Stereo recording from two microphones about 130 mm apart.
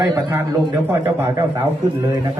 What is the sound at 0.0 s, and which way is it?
A man's voice, 20° right (ahead or behind).